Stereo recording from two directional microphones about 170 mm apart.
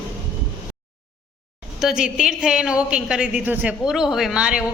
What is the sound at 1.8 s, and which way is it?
A woman's voice, 5° right (ahead or behind).